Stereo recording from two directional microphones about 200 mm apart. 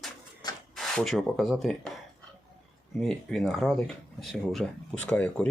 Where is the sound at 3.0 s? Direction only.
Centre (ahead or behind).